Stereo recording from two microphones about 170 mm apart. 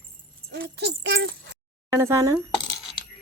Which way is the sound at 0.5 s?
75° right (ahead or behind).